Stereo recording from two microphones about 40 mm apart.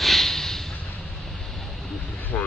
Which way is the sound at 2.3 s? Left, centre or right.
Left.